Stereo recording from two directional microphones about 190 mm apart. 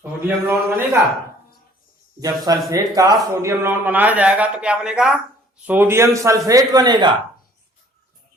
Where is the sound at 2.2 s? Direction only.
20° right (ahead or behind).